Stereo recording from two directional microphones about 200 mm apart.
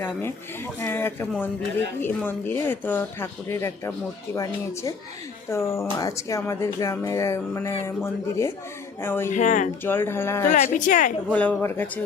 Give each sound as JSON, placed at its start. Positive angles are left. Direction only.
{"t": 0.0, "sound": "speech", "side_deg": 10}
{"t": 9.3, "sound": "speech", "side_deg": 40}
{"t": 9.8, "sound": "speech", "side_deg": 10}
{"t": 10.5, "sound": "speech", "side_deg": 40}
{"t": 11.3, "sound": "speech", "side_deg": 10}